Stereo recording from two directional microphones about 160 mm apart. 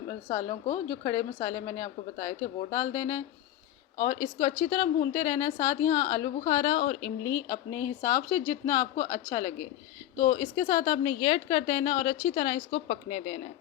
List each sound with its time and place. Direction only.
0.1 s a woman's voice: 15° left (ahead or behind)
12.9 s speech: 40° left (ahead or behind)